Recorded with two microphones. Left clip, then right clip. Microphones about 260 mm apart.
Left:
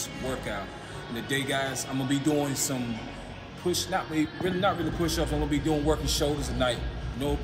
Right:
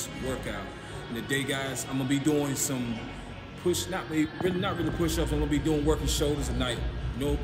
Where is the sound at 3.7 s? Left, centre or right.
Centre.